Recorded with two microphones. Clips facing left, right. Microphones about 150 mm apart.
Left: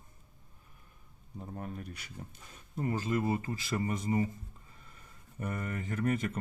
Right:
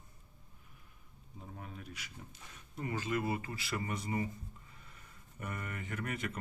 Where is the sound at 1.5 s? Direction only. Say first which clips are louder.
Left 6 dB; 50° left (ahead or behind).